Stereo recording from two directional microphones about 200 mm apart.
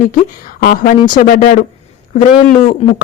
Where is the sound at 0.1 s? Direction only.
45° left (ahead or behind).